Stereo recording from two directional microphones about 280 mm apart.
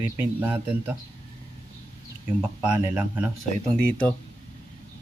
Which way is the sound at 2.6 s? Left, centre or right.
Centre.